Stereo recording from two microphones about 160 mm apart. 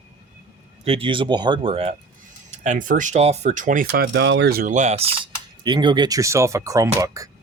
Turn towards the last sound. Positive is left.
turn(degrees=-20)  # may be behind; listen again after turning